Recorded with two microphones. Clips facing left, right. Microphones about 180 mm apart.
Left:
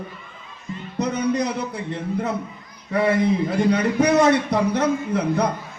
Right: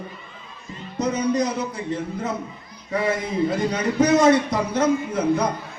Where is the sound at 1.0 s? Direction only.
60° left (ahead or behind).